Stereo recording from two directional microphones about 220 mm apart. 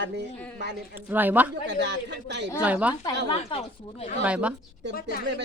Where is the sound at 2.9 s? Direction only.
15° left (ahead or behind).